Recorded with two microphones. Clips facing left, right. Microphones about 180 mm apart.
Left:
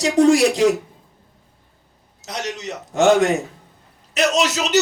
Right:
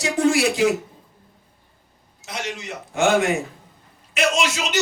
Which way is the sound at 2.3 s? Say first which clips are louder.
Left 3 dB; 40° left (ahead or behind).